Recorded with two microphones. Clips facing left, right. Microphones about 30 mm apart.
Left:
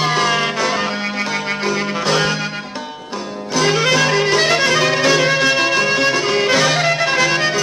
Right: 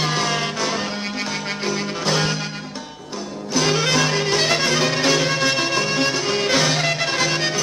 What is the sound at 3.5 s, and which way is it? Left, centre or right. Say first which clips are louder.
Music: left 4 dB; centre.